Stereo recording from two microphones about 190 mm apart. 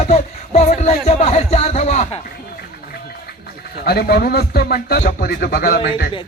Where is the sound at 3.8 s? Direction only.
55° left (ahead or behind).